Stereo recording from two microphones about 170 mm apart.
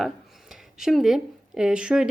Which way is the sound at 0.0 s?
Centre (ahead or behind).